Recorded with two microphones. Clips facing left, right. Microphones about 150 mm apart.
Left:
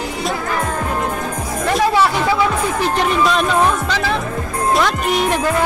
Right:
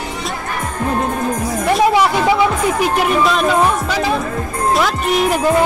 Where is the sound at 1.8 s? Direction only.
15° right (ahead or behind).